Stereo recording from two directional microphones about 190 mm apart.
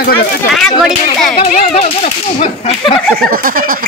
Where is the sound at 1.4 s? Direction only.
35° left (ahead or behind).